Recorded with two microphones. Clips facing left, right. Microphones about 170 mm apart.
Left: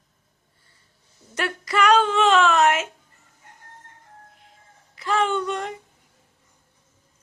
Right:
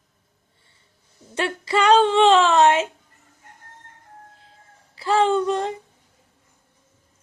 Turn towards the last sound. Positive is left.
turn(degrees=-30)  # may be behind; listen again after turning